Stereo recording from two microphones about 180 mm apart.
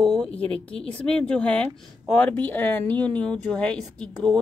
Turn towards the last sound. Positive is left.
turn(degrees=5)  # may be behind; listen again after turning